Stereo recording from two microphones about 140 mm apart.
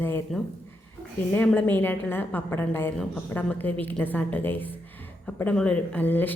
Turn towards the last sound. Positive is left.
turn(degrees=15)  # may be behind; listen again after turning